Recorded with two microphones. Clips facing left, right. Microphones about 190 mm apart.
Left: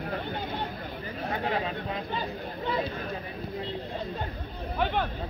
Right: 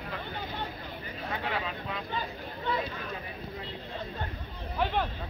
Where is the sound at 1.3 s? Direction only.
35° left (ahead or behind).